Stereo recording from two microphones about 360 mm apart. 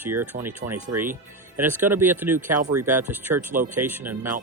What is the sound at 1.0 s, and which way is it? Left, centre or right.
Speech, centre.